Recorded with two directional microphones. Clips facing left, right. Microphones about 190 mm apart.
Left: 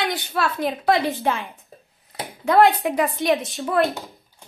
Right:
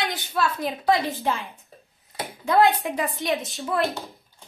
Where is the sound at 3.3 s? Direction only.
Centre (ahead or behind).